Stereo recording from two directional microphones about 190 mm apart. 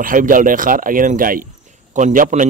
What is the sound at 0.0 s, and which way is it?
Speech, 45° right (ahead or behind).